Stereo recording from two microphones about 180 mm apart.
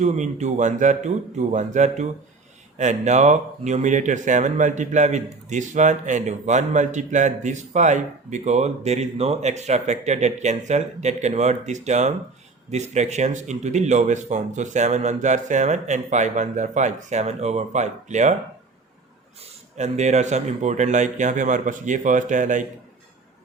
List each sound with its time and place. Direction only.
0.0 s speech: 40° right (ahead or behind)
19.7 s speech: 40° right (ahead or behind)